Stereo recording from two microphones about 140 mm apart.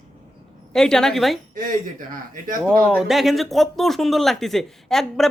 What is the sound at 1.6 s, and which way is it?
Speech, 75° right (ahead or behind).